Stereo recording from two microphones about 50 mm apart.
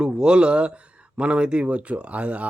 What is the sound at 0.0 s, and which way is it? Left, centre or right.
Speech, centre.